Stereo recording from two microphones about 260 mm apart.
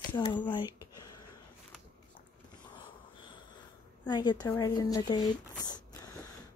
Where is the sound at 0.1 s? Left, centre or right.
Centre.